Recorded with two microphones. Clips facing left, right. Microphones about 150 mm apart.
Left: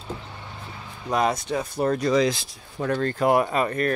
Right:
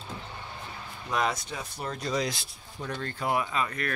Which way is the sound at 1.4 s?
55° left (ahead or behind).